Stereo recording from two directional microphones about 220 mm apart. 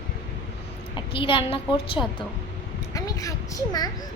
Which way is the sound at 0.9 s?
25° left (ahead or behind).